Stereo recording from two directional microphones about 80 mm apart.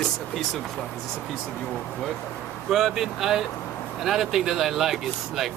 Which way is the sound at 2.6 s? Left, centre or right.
Centre.